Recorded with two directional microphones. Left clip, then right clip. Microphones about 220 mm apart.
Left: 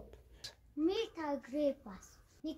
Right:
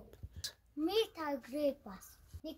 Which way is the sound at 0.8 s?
50° right (ahead or behind).